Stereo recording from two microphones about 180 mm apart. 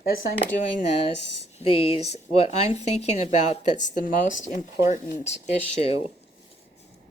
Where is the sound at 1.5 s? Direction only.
35° left (ahead or behind).